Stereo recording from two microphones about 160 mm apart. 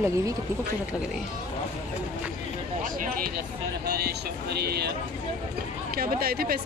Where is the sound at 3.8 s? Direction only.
90° right.